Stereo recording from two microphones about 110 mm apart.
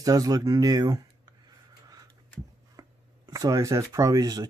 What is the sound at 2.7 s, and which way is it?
Speech, 35° right (ahead or behind).